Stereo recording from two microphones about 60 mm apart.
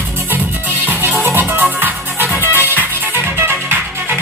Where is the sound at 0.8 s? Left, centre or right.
Right.